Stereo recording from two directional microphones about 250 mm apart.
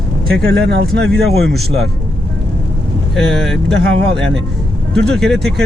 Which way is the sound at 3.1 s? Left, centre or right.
Centre.